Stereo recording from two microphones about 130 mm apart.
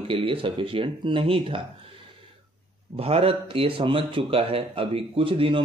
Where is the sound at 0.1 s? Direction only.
45° right (ahead or behind).